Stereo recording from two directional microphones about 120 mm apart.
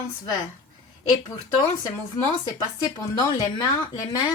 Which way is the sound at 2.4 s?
30° left (ahead or behind).